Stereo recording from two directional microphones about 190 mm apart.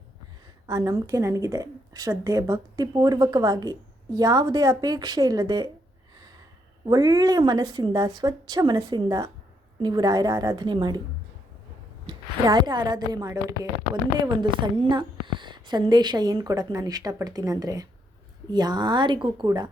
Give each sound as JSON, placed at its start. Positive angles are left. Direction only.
{"t": 0.7, "sound": "a woman's voice", "side_deg": -20}
{"t": 6.8, "sound": "a woman's voice", "side_deg": -20}
{"t": 12.0, "sound": "a woman's voice", "side_deg": -20}